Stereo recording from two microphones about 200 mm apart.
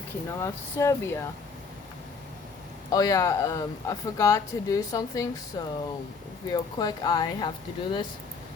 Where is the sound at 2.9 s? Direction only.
15° left (ahead or behind).